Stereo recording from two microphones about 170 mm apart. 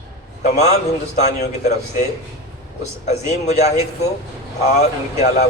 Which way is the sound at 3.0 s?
40° left (ahead or behind).